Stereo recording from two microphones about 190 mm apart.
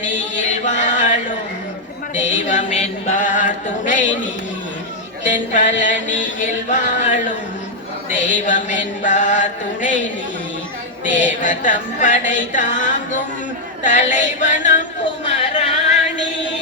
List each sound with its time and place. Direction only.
0.7 s a sound: 40° left (ahead or behind)
2.1 s music: 40° left (ahead or behind)
5.2 s music: 40° left (ahead or behind)
5.8 s mantra: 40° left (ahead or behind)
11.0 s music: 40° left (ahead or behind)
15.3 s a sound: 35° left (ahead or behind)